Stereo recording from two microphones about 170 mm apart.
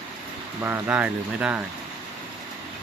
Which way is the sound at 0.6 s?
10° right (ahead or behind).